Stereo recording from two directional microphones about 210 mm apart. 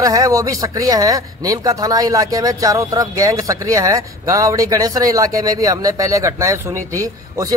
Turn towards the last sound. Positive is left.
turn(degrees=-15)  # may be behind; listen again after turning